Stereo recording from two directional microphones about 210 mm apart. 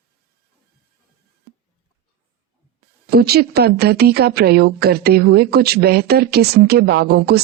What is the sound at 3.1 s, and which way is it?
A woman's voice, 50° right (ahead or behind).